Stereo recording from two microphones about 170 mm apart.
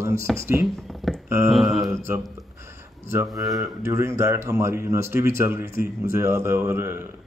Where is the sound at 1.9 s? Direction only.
15° right (ahead or behind).